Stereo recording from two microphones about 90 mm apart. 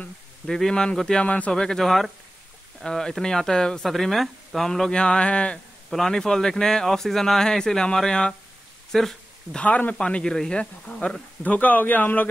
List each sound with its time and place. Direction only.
0.0 s speech: 5° left (ahead or behind)
1.5 s speech: 5° left (ahead or behind)